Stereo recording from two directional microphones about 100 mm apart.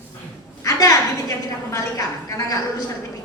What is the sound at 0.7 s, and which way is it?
A woman's voice, 35° left (ahead or behind).